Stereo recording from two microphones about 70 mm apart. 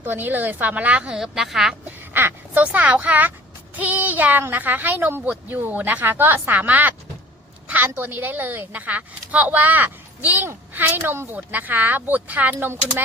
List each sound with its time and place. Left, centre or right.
0.0 s speech: right
1.1 s a woman's voice: centre
2.6 s speech: right